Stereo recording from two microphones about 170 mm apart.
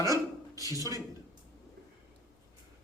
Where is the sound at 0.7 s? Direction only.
20° right (ahead or behind).